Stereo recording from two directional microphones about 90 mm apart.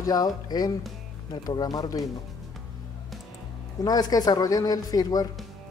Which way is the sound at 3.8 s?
45° left (ahead or behind).